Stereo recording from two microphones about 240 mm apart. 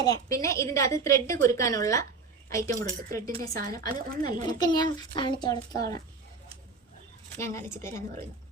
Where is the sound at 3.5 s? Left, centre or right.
Right.